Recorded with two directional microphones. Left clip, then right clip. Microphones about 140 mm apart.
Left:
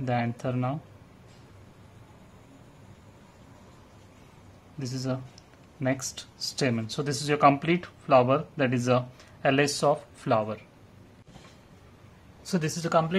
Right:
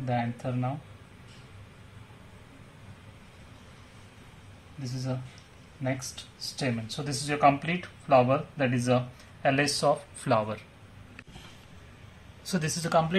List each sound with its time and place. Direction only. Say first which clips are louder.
0.0 s speech: left 2 dB; 65° left (ahead or behind)
4.8 s speech: left 4 dB; 80° left; by 9.9 s 40° left (ahead or behind)
10.2 s speech: left 1 dB; 20° left (ahead or behind)
12.4 s speech: left 1 dB; 30° left (ahead or behind)